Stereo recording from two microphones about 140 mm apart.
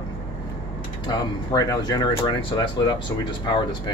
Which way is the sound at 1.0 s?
25° left (ahead or behind).